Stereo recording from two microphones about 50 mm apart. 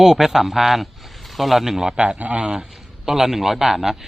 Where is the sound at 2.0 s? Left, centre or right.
Right.